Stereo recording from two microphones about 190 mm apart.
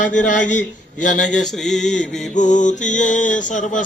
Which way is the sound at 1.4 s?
Centre (ahead or behind).